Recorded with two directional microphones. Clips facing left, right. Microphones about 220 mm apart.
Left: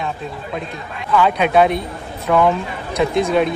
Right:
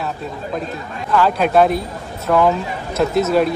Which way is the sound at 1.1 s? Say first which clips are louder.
Even; centre (ahead or behind).